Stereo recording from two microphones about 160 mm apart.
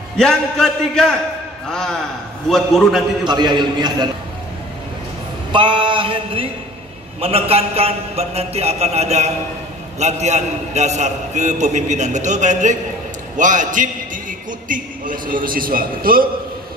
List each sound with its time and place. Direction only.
0.2 s a man's voice: 5° left (ahead or behind)
3.3 s a man's voice: 25° right (ahead or behind)
5.5 s a man's voice: 30° right (ahead or behind); by 16.3 s 65° right (ahead or behind)